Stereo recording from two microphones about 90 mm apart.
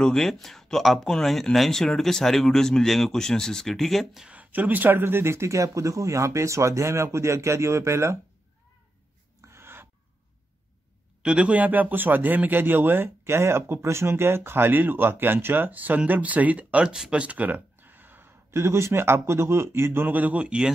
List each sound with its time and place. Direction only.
0.0 s speech: 5° left (ahead or behind)
4.3 s speech: 20° right (ahead or behind)
9.4 s a sound: 30° right (ahead or behind)
11.2 s a man's voice: 15° right (ahead or behind)